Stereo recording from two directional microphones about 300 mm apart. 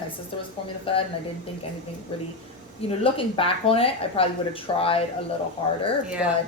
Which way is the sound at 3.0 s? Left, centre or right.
Centre.